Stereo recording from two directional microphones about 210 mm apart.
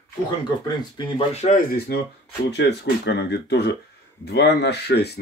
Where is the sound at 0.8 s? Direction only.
20° left (ahead or behind).